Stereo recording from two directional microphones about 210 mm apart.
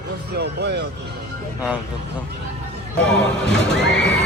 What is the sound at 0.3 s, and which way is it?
Speech, 50° right (ahead or behind).